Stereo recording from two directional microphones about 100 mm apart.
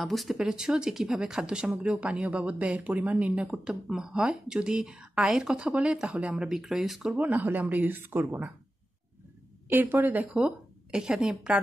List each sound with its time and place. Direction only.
0.0 s speech: centre (ahead or behind)
7.2 s speech: 15° right (ahead or behind)
9.7 s speech: 20° right (ahead or behind)